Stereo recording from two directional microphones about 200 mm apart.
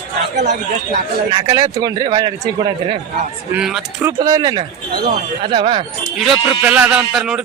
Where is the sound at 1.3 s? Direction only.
20° right (ahead or behind).